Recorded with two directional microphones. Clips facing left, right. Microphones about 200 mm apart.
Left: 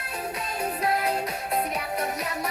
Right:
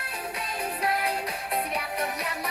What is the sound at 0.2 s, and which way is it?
Music, 35° left (ahead or behind).